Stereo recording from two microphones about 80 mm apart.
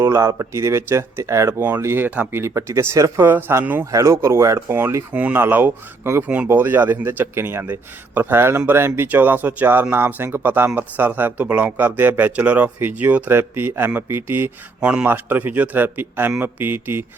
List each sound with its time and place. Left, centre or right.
0.0 s speech: right
2.4 s speech: right
3.2 s speech: right
3.9 s speech: right
5.1 s speech: right
6.2 s speech: centre
6.5 s speech: right
14.8 s a man's voice: centre
15.0 s speech: right